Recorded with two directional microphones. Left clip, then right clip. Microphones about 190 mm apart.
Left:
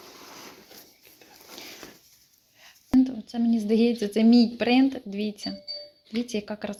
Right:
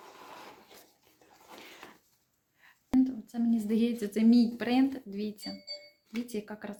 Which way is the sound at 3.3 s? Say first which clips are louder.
Left 6 dB; 30° left (ahead or behind).